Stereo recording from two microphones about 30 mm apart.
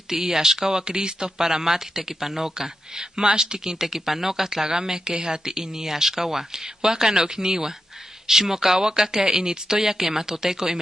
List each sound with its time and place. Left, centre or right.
0.1 s speech: centre
0.8 s speech: right
1.4 s speech: centre